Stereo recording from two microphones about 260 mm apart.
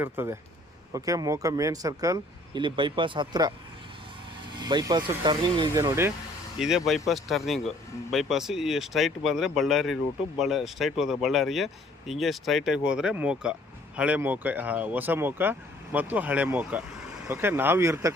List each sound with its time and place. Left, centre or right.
0.0 s speech: centre
4.5 s speech: centre